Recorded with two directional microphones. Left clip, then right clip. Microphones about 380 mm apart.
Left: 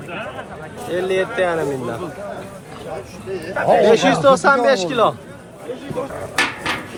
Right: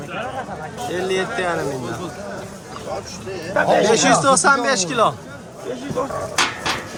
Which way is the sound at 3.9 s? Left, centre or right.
Centre.